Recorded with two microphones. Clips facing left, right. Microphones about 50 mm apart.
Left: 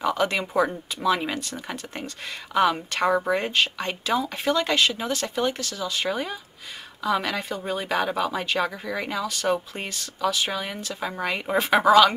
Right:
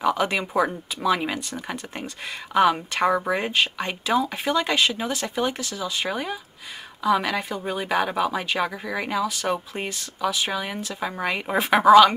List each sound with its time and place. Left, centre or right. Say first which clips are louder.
0.0 s speech: right 1 dB; centre